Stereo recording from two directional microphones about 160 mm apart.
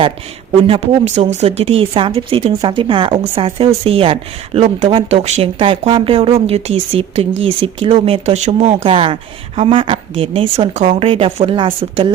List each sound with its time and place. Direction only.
0.7 s speech: 40° right (ahead or behind)